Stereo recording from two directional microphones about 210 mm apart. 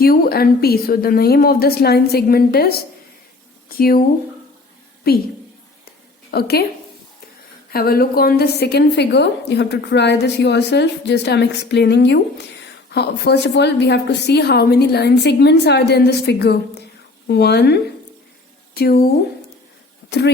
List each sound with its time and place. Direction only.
0.0 s a woman's voice: 45° left (ahead or behind)
6.3 s a woman's voice: 45° left (ahead or behind)
7.7 s a woman's voice: 45° left (ahead or behind)